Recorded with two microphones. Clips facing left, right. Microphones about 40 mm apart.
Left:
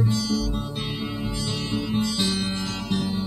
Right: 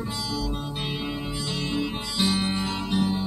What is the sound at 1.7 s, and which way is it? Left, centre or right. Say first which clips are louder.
Music: left 5 dB; centre.